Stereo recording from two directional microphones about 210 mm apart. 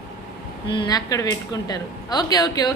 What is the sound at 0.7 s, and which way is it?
A woman's voice, 20° left (ahead or behind).